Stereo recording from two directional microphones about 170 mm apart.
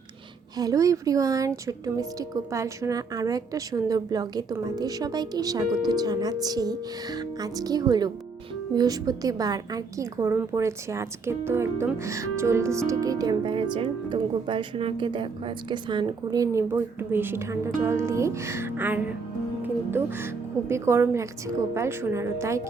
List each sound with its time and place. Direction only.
0.5 s speech: 20° right (ahead or behind)